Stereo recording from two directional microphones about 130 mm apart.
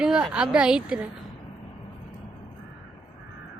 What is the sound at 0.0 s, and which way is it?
A woman's voice, 5° right (ahead or behind).